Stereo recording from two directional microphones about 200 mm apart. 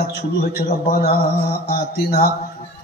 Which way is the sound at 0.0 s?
50° left (ahead or behind).